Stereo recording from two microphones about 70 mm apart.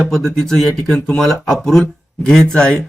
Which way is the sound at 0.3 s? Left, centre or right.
Centre.